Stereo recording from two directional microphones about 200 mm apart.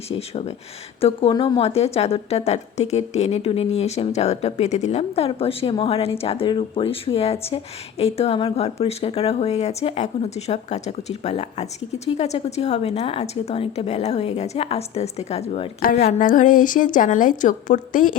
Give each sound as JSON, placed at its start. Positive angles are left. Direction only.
{"t": 0.1, "sound": "a woman's voice", "side_deg": 30}